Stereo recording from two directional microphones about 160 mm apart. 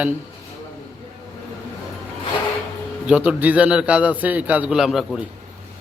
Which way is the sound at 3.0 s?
5° right (ahead or behind).